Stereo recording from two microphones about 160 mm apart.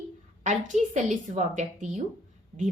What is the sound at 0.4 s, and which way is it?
A woman's voice, 50° right (ahead or behind).